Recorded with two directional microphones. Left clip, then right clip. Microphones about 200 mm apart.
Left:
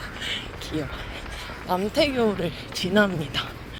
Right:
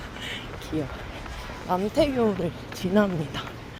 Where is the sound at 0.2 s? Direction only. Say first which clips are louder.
Left 4 dB; centre (ahead or behind).